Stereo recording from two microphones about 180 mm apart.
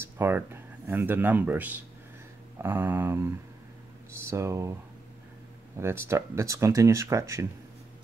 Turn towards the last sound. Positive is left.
turn(degrees=-15)  # may be behind; listen again after turning